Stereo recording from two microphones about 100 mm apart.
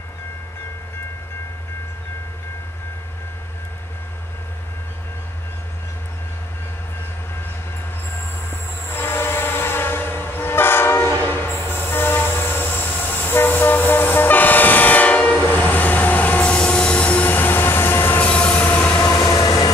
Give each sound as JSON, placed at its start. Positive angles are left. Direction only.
{"t": 8.5, "sound": "train", "side_deg": 20}
{"t": 18.9, "sound": "train", "side_deg": 30}
{"t": 19.2, "sound": "train", "side_deg": 45}